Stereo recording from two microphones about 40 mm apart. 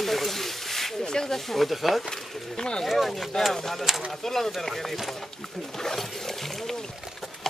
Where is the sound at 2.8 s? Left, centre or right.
Centre.